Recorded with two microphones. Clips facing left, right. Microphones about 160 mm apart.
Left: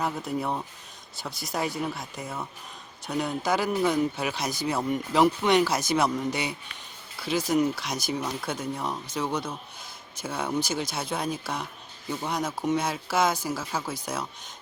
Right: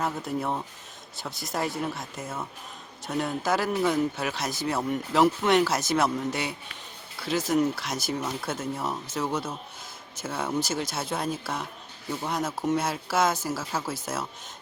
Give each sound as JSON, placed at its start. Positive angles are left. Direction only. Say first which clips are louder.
{"t": 0.0, "sound": "speech", "louder": "even", "side_deg": 0}